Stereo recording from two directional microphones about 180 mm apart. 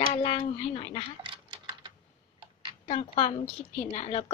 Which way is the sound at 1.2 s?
25° right (ahead or behind).